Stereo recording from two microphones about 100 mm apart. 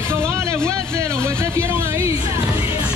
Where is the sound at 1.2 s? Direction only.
25° right (ahead or behind).